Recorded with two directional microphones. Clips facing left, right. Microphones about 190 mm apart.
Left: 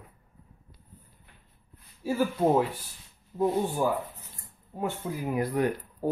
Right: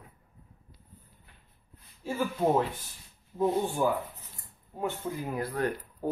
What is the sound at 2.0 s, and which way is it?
Speech, 10° left (ahead or behind).